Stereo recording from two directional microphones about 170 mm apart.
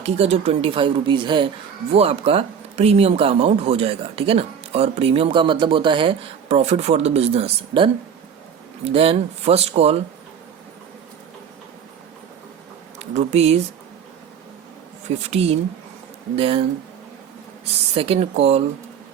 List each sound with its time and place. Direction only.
0.0 s speech: 35° right (ahead or behind)
13.0 s speech: 40° right (ahead or behind)
15.2 s speech: 40° right (ahead or behind)
17.7 s speech: 35° right (ahead or behind)